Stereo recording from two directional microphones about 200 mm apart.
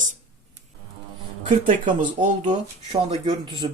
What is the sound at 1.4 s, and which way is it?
Speech, 40° right (ahead or behind).